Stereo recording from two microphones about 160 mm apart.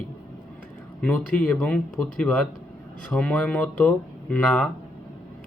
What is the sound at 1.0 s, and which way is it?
A man's voice, 5° left (ahead or behind).